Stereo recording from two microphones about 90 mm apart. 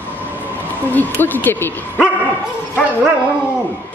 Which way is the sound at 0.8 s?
20° left (ahead or behind).